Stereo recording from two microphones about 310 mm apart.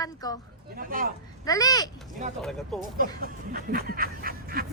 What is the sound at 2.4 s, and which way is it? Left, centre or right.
Speech, centre.